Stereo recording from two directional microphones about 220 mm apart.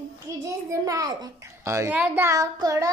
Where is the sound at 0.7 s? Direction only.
15° right (ahead or behind).